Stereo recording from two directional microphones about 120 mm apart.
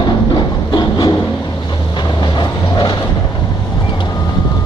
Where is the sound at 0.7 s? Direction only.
35° left (ahead or behind).